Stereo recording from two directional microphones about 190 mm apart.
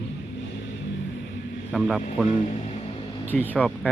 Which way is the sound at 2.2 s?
40° left (ahead or behind).